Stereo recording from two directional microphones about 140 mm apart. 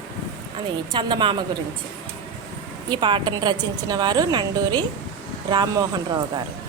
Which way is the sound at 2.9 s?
35° right (ahead or behind).